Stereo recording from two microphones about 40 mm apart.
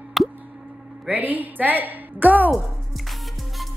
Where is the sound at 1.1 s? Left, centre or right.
Right.